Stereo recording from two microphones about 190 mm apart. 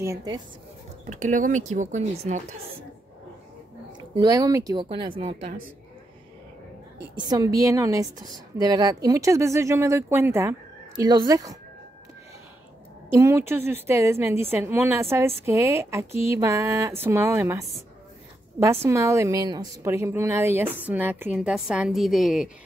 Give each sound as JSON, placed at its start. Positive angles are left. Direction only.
{"t": 0.0, "sound": "a woman's voice", "side_deg": -15}
{"t": 1.0, "sound": "speech", "side_deg": -40}
{"t": 4.1, "sound": "a woman's voice", "side_deg": -20}
{"t": 7.2, "sound": "a woman's voice", "side_deg": -20}
{"t": 13.1, "sound": "a woman's voice", "side_deg": -15}
{"t": 18.9, "sound": "a woman's voice", "side_deg": -15}